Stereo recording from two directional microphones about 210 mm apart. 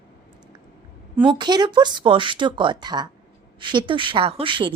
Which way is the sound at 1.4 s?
20° right (ahead or behind).